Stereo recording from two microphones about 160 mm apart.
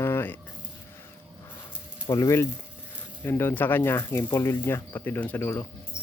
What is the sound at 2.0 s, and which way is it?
Speech, 20° left (ahead or behind).